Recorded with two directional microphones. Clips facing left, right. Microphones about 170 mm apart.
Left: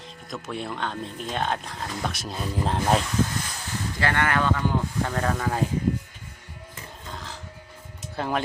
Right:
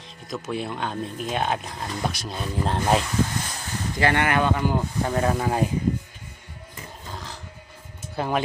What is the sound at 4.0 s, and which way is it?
Speech, 20° right (ahead or behind).